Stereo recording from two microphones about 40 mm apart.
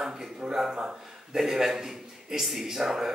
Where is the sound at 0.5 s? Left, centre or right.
Centre.